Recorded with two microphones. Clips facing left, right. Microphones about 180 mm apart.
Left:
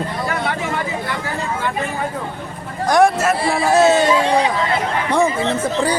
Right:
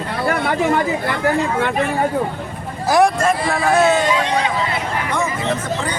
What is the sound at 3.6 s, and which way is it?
Speech, 25° left (ahead or behind).